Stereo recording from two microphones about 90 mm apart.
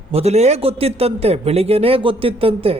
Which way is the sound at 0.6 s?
90° right.